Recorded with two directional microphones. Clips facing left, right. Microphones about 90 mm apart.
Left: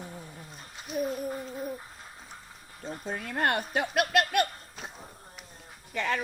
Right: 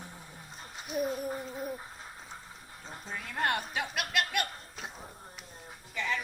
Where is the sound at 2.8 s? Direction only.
50° left (ahead or behind).